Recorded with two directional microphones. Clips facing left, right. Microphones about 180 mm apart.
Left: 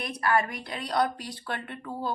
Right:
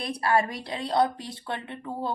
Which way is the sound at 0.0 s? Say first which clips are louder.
Right 2 dB; 30° right (ahead or behind).